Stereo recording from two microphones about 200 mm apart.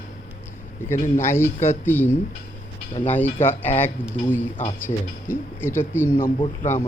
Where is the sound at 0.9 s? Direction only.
40° left (ahead or behind).